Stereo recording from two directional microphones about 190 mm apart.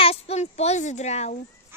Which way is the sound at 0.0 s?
35° left (ahead or behind).